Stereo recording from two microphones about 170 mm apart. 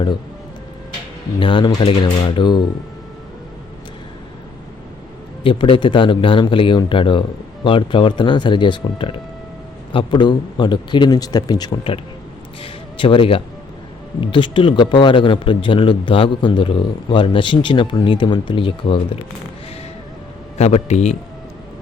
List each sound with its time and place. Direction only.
1.4 s a man's voice: 30° left (ahead or behind)
5.4 s a man's voice: 30° left (ahead or behind)
12.6 s music: 30° left (ahead or behind)
14.2 s a man's voice: 30° left (ahead or behind)
20.6 s a man's voice: 40° left (ahead or behind)